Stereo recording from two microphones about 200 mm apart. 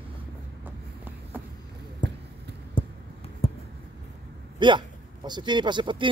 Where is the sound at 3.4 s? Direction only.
30° left (ahead or behind).